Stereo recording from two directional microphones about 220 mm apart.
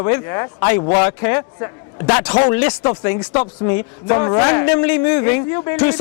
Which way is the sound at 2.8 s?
25° left (ahead or behind).